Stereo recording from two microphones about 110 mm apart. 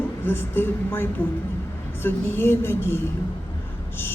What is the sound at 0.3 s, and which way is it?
Speech, 20° left (ahead or behind).